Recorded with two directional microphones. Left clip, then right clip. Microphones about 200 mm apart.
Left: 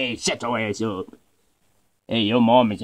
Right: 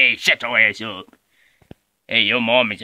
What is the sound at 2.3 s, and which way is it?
Speech, 30° right (ahead or behind).